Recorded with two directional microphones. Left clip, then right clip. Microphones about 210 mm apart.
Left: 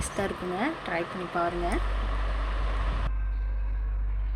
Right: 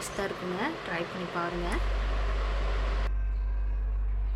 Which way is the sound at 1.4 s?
10° left (ahead or behind).